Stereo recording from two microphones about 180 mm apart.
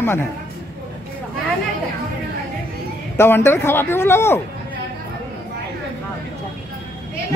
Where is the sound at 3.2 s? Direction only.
10° left (ahead or behind).